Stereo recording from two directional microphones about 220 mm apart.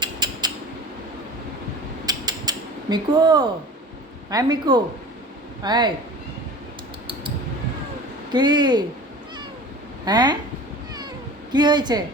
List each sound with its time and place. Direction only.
0.0 s a sound: 20° right (ahead or behind)
2.0 s creak: 15° right (ahead or behind)
4.3 s speech: 15° right (ahead or behind)
8.3 s speech: 20° right (ahead or behind)
10.1 s speech: 20° right (ahead or behind)
11.5 s speech: 20° right (ahead or behind)